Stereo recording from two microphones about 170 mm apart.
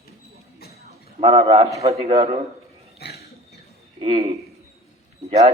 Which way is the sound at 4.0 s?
35° right (ahead or behind).